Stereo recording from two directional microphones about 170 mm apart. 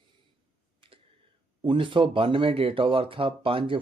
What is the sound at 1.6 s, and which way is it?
Speech, 30° right (ahead or behind).